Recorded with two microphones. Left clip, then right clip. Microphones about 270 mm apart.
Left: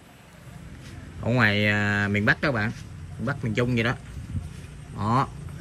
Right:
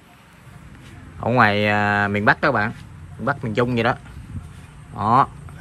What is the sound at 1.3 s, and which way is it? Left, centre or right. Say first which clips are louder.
Speech: right 6 dB; centre.